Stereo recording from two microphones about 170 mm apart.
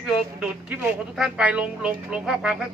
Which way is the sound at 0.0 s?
10° right (ahead or behind).